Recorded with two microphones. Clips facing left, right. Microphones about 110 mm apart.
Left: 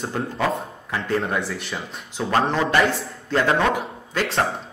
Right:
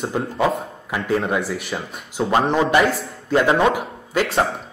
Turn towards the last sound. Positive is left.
turn(degrees=-5)  # may be behind; listen again after turning